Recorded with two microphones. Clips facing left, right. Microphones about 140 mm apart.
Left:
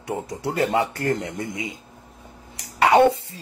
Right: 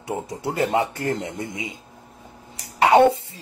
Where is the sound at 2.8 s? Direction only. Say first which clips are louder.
Right 1 dB; 20° right (ahead or behind).